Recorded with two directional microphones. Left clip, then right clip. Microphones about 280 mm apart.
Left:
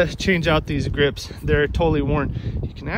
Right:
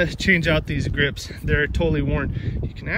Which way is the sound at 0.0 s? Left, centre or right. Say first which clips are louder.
Even; centre.